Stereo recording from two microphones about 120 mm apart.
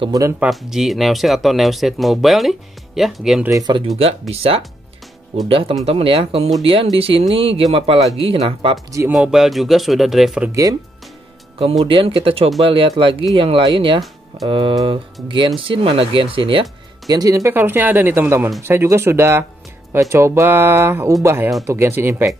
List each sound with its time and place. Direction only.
0.4 s speech: 5° right (ahead or behind)
3.7 s speech: 40° right (ahead or behind)
4.0 s speech: 55° right (ahead or behind)
9.1 s speech: 5° right (ahead or behind)
10.5 s speech: 30° right (ahead or behind)
11.8 s speech: 50° right (ahead or behind)
17.1 s speech: 30° right (ahead or behind)